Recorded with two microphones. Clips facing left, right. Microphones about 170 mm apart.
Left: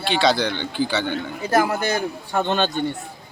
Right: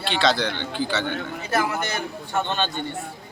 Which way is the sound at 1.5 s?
35° left (ahead or behind).